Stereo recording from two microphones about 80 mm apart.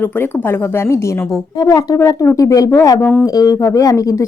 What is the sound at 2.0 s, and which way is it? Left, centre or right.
Speech, left.